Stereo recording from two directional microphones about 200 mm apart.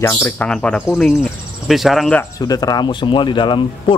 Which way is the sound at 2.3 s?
20° left (ahead or behind).